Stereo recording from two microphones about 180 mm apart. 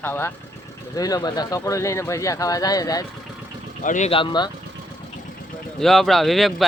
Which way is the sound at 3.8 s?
45° left (ahead or behind).